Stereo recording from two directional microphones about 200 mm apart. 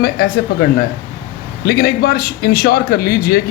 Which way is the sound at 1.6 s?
50° left (ahead or behind).